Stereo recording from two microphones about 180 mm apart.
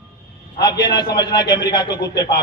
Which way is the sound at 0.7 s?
25° left (ahead or behind).